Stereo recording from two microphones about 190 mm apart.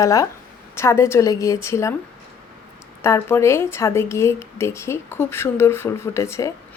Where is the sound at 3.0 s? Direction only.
10° left (ahead or behind).